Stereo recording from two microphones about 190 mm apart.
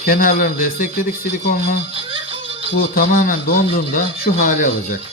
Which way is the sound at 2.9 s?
50° left (ahead or behind).